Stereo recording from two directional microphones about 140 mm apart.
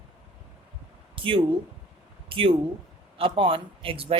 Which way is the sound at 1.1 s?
40° right (ahead or behind).